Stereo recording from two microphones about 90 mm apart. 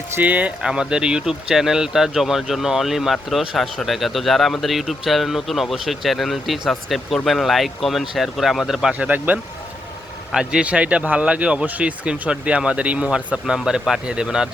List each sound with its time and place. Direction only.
0.2 s speech: 15° right (ahead or behind)